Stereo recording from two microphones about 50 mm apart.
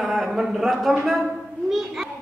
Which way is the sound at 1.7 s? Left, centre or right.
Centre.